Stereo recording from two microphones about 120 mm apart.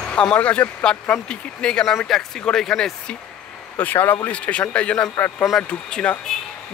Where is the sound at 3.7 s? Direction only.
15° left (ahead or behind).